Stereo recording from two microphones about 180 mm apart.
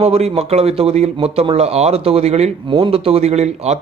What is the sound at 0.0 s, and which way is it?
Speech, 35° right (ahead or behind).